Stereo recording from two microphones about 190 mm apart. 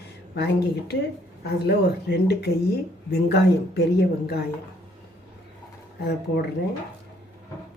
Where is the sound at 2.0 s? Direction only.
60° left (ahead or behind).